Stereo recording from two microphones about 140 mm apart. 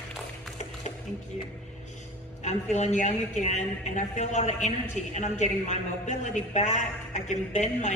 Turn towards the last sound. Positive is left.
turn(degrees=55)  # may be behind; listen again after turning